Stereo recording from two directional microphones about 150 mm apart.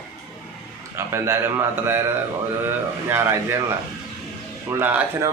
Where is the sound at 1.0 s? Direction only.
15° right (ahead or behind).